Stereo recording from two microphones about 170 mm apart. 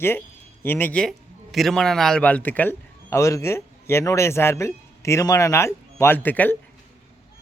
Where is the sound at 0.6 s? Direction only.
10° left (ahead or behind).